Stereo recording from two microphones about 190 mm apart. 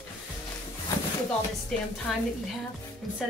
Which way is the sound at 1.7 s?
Centre (ahead or behind).